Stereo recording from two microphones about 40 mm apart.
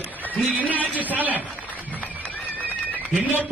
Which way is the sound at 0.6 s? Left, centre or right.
Right.